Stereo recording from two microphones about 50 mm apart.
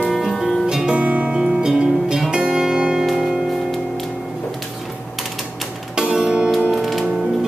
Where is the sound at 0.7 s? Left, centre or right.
Centre.